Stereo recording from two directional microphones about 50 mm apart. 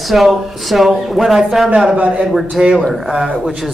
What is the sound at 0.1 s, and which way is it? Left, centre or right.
Speech, centre.